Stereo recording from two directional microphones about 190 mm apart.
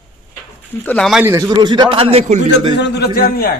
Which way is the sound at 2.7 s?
60° left (ahead or behind).